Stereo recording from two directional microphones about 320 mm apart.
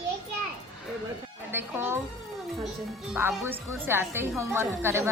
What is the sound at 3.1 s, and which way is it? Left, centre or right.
A woman's voice, centre.